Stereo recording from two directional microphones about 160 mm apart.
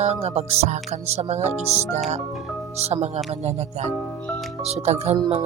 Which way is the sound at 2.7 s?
40° right (ahead or behind).